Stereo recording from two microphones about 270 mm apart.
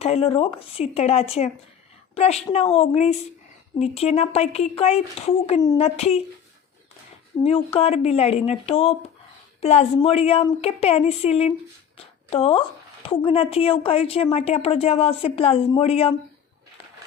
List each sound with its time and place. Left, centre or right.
0.0 s a woman's voice: left
7.4 s a woman's voice: left